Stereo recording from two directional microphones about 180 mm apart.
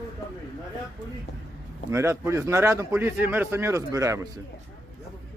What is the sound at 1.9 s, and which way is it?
A man's voice, 15° right (ahead or behind).